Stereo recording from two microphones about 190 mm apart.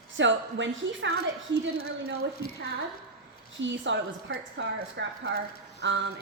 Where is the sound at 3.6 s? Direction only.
70° right (ahead or behind).